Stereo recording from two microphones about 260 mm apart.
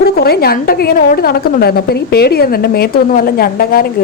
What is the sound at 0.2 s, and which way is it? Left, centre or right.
A woman's voice, left.